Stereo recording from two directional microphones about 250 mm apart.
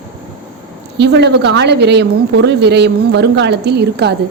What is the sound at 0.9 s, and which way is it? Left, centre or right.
A woman's voice, right.